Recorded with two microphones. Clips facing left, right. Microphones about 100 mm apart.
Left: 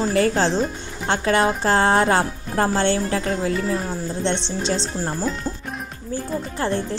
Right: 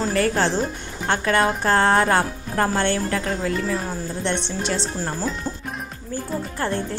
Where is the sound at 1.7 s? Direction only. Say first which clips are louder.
Even; 15° left (ahead or behind).